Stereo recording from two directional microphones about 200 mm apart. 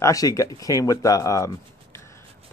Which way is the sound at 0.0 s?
15° left (ahead or behind).